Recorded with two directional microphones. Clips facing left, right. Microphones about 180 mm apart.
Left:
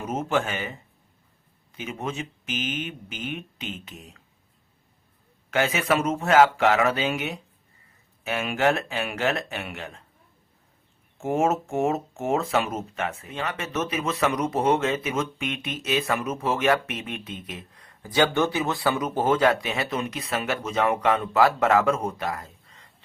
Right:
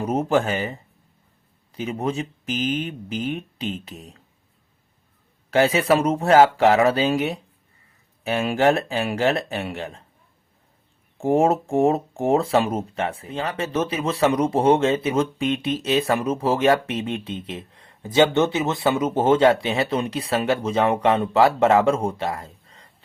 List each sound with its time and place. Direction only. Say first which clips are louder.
0.0 s speech: right 5 dB; 35° right (ahead or behind)
5.5 s speech: right 6 dB; 35° right (ahead or behind)
11.2 s speech: right 5 dB; 35° right (ahead or behind)